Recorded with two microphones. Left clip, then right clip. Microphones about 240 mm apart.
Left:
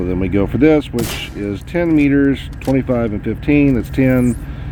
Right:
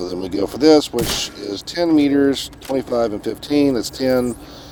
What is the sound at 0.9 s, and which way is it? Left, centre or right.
Speech, centre.